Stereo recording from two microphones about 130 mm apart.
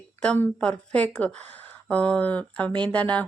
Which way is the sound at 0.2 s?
10° left (ahead or behind).